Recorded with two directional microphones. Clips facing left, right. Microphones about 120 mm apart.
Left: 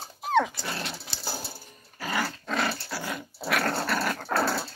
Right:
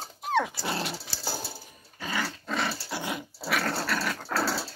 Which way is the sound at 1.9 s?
5° left (ahead or behind).